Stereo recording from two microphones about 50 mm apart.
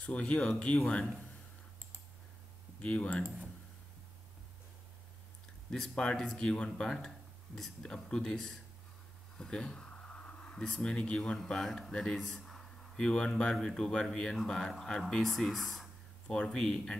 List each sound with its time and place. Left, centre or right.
0.0 s speech: left
2.8 s speech: left
5.7 s speech: centre
9.4 s a sound: centre
11.4 s speech: centre
16.3 s speech: centre